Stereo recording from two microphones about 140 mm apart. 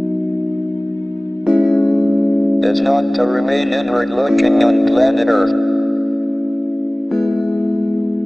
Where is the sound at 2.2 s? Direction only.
5° left (ahead or behind).